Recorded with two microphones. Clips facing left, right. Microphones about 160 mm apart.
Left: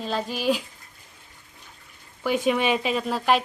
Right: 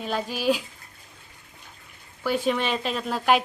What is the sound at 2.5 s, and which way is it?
Speech, 5° left (ahead or behind).